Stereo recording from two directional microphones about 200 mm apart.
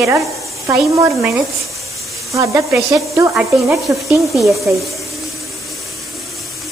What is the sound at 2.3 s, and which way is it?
Speech, 15° right (ahead or behind).